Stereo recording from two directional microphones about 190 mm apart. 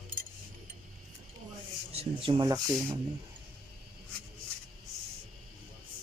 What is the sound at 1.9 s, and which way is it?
Speech, 30° right (ahead or behind).